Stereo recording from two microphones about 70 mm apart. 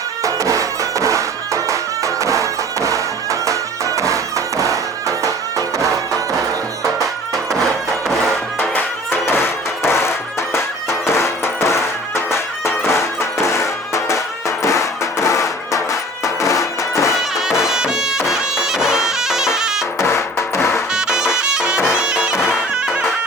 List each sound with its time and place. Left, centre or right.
0.2 s music: right
9.0 s music: left
17.6 s music: centre
20.0 s music: left
20.9 s music: centre
21.9 s bagpipes: centre